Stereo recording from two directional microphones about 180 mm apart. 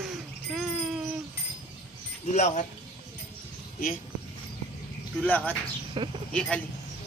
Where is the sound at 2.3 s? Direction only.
40° left (ahead or behind).